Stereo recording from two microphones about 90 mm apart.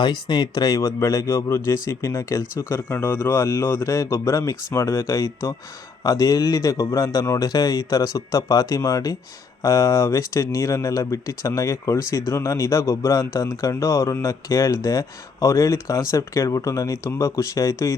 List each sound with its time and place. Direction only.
0.0 s speech: 55° left (ahead or behind); by 17.9 s 35° left (ahead or behind)